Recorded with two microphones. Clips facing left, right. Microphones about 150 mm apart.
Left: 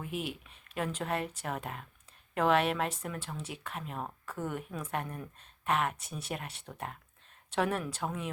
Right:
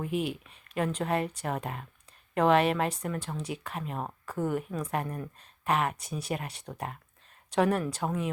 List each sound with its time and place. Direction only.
0.0 s speech: centre (ahead or behind)
4.0 s speech: 30° right (ahead or behind)
4.4 s speech: centre (ahead or behind)